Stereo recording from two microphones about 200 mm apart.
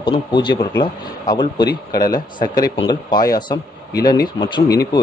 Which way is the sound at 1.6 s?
50° left (ahead or behind).